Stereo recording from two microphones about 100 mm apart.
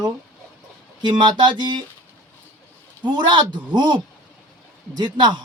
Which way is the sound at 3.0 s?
50° right (ahead or behind).